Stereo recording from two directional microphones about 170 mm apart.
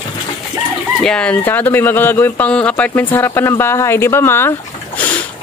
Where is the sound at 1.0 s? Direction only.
5° left (ahead or behind).